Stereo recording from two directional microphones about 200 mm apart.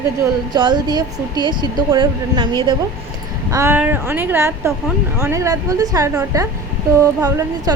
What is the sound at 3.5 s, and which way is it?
A woman's voice, 15° right (ahead or behind).